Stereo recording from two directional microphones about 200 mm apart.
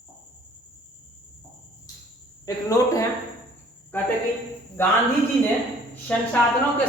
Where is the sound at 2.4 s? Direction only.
15° left (ahead or behind).